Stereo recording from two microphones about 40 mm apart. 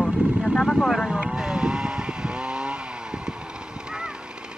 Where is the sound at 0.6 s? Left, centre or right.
Centre.